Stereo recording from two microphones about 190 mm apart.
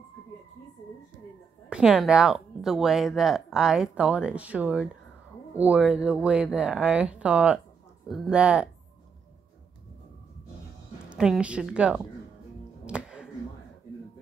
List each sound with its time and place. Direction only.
1.7 s speech: 5° right (ahead or behind)
11.1 s speech: 5° right (ahead or behind)
12.8 s a sound: 5° right (ahead or behind)